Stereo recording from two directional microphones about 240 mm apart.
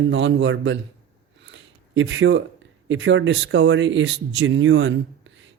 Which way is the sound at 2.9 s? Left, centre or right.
Right.